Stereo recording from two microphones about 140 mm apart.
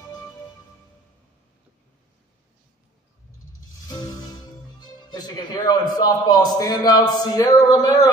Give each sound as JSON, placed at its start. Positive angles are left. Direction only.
{"t": 3.8, "sound": "music", "side_deg": 30}
{"t": 4.7, "sound": "a man's voice", "side_deg": 30}